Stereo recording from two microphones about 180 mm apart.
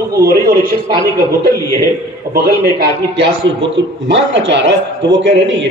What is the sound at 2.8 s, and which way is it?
A man's voice, 75° right (ahead or behind).